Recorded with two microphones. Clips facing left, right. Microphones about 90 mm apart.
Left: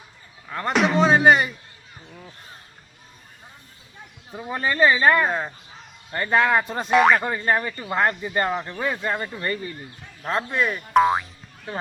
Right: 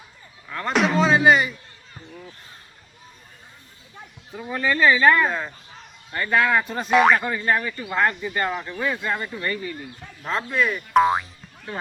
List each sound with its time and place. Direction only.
0.4 s speech: 25° left (ahead or behind)
0.7 s speech: centre (ahead or behind)
1.0 s speech: 40° left (ahead or behind)
4.4 s speech: 25° left (ahead or behind)
6.9 s speech: centre (ahead or behind)
7.3 s speech: 30° left (ahead or behind)
10.9 s speech: centre (ahead or behind)